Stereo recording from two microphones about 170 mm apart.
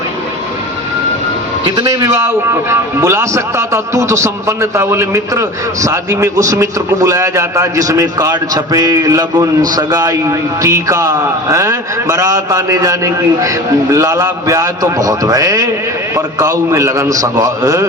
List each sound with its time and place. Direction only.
1.7 s a man's voice: 20° right (ahead or behind)